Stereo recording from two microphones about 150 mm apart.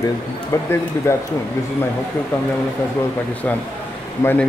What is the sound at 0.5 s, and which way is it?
Speech, 20° left (ahead or behind).